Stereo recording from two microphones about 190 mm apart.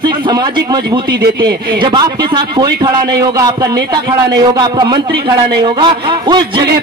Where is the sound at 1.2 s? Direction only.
60° right (ahead or behind).